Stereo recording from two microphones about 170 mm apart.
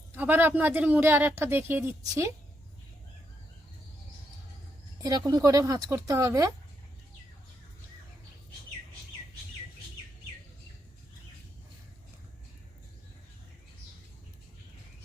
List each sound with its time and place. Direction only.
0.1 s speech: 10° right (ahead or behind)
5.0 s a woman's voice: 20° right (ahead or behind)